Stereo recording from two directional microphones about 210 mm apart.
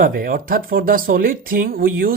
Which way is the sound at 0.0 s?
45° right (ahead or behind).